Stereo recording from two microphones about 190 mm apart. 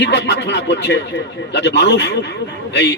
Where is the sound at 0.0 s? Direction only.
65° left (ahead or behind).